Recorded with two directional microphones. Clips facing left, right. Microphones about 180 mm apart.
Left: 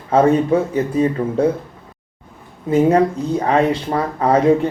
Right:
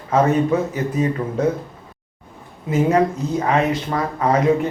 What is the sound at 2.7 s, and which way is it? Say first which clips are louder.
Speech: left 3 dB; 30° left (ahead or behind).